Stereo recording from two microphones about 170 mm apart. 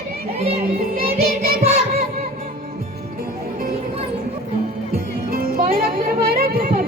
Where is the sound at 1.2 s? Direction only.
65° right (ahead or behind).